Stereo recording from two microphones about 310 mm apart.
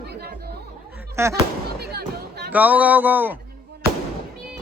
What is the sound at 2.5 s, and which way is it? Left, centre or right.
Speech, centre.